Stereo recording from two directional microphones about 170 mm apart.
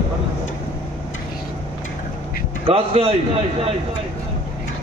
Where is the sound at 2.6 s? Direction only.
35° right (ahead or behind).